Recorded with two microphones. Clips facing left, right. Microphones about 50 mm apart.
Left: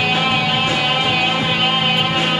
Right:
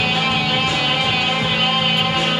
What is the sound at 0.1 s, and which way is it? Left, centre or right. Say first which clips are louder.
Music: left 2 dB; centre.